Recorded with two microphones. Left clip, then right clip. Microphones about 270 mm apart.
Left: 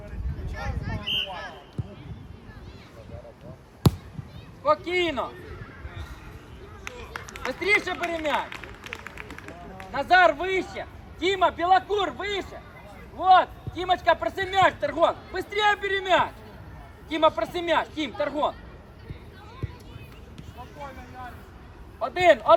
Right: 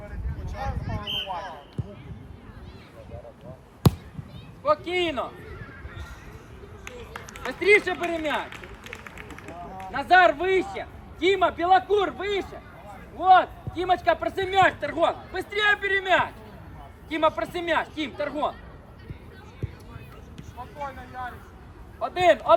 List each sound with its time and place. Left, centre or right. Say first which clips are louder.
3.8 s a sound: right 1 dB; centre
4.6 s speech: left 1 dB; left
6.8 s run: left 2 dB; left
13.1 s a man's voice: right 1 dB; left
20.8 s speech: right 6 dB; centre
22.0 s speech: left 1 dB; left